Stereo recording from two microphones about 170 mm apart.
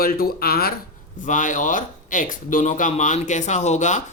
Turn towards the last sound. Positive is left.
turn(degrees=45)  # may be behind; listen again after turning